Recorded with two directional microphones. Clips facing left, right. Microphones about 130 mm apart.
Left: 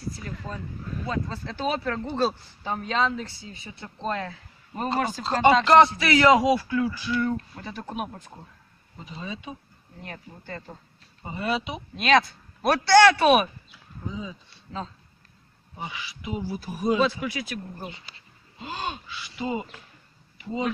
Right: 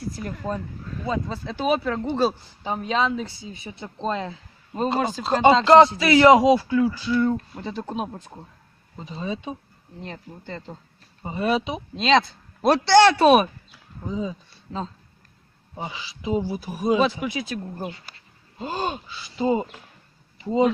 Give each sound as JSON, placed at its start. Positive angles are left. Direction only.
{"t": 0.2, "sound": "speech", "side_deg": -50}
{"t": 1.0, "sound": "speech", "side_deg": -15}
{"t": 16.6, "sound": "speech", "side_deg": -15}
{"t": 18.6, "sound": "speech", "side_deg": -40}